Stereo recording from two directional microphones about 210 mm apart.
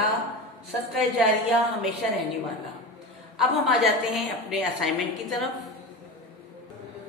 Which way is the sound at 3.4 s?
Centre (ahead or behind).